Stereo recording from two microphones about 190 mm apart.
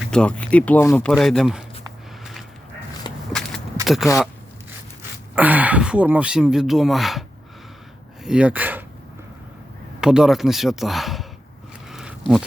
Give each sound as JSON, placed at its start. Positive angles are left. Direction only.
{"t": 0.0, "sound": "speech", "side_deg": 5}
{"t": 3.1, "sound": "walk", "side_deg": 25}
{"t": 3.8, "sound": "speech", "side_deg": 0}
{"t": 5.3, "sound": "speech", "side_deg": -10}
{"t": 10.0, "sound": "speech", "side_deg": -5}
{"t": 11.9, "sound": "a sound", "side_deg": 0}